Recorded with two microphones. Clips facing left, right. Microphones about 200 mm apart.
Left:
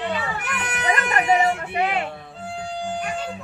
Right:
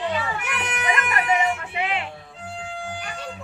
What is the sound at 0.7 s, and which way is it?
Music, 35° left (ahead or behind).